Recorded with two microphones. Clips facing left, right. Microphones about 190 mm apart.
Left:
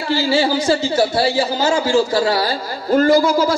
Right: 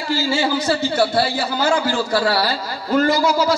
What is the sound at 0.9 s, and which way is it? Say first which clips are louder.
A man's voice: left 2 dB; 60° right (ahead or behind).